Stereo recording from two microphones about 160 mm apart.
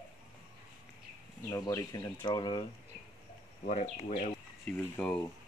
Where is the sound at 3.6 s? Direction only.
60° left (ahead or behind).